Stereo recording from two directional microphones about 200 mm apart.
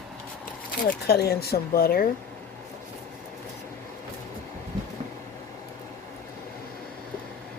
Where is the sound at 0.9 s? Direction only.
50° left (ahead or behind).